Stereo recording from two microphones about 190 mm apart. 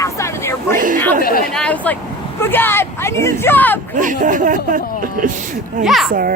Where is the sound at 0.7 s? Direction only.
45° right (ahead or behind).